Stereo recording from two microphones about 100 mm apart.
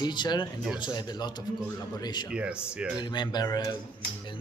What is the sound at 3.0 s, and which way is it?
Speech, 50° left (ahead or behind).